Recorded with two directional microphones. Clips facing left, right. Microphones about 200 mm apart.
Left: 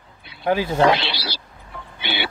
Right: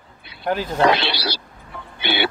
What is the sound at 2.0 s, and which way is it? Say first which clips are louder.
Music: right 5 dB; 60° right (ahead or behind).